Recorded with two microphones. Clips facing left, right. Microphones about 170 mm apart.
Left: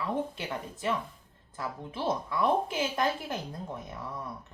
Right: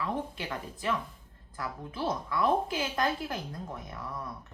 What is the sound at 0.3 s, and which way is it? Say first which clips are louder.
Speech: left 1 dB; 20° left (ahead or behind).